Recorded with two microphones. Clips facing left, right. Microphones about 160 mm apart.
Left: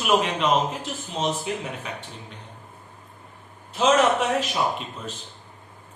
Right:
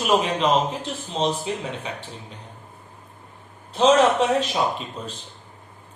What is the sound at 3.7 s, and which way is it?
Speech, 30° right (ahead or behind).